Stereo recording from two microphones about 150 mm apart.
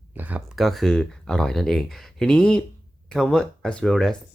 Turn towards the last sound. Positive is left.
turn(degrees=5)  # may be behind; listen again after turning